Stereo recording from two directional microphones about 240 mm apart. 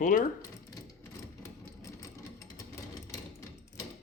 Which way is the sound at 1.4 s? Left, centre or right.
Centre.